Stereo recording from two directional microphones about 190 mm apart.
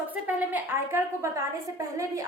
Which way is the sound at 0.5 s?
15° right (ahead or behind).